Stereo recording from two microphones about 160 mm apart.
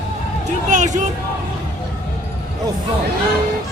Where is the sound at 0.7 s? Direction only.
50° right (ahead or behind).